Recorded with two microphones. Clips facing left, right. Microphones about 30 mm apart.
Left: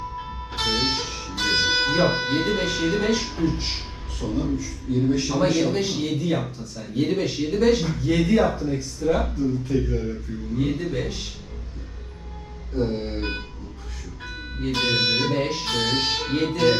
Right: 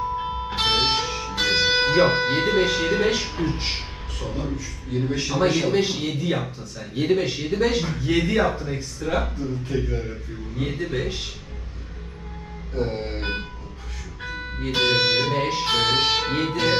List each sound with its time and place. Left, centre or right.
0.2 s music: right; by 2.0 s centre
2.0 s music: right
3.4 s a man's voice: right
5.3 s music: centre
5.7 s speech: right
6.1 s music: right
6.9 s speech: right
7.9 s music: right
8.6 s speech: right
9.6 s music: right
12.7 s music: right
14.6 s music: right